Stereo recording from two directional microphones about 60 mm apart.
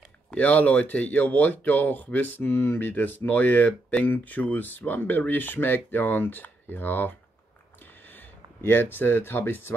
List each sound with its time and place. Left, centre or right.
0.3 s speech: left
8.1 s speech: left